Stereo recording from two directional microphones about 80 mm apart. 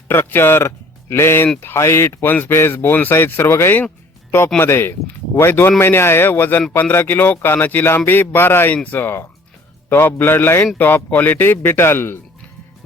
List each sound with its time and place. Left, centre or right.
0.1 s speech: left